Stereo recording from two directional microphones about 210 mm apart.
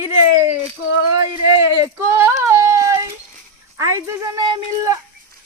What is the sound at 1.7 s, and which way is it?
Speech, 15° right (ahead or behind).